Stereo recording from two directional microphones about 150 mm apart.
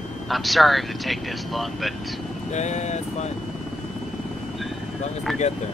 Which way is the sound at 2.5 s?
50° left (ahead or behind).